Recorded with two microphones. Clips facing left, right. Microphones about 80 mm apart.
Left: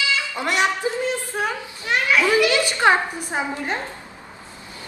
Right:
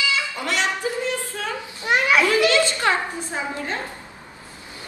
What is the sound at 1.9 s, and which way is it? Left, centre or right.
Children playing, right.